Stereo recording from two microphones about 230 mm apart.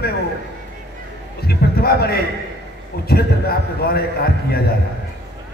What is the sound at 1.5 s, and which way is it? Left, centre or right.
A man's voice, left.